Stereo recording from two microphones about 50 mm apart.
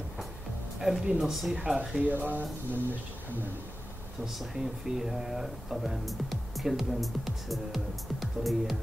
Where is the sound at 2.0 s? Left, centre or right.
Right.